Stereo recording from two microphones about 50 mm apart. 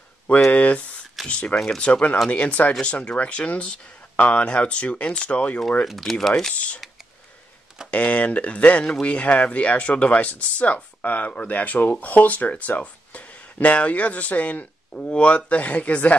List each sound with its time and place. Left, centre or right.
0.5 s speech: left
5.9 s speech: centre
7.9 s speech: left